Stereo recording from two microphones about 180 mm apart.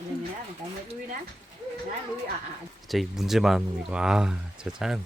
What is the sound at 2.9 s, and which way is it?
Speech, centre (ahead or behind).